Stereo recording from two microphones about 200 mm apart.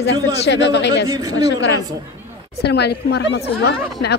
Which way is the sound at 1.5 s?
60° left (ahead or behind).